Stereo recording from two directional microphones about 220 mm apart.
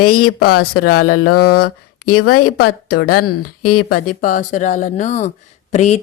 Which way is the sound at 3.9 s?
40° left (ahead or behind).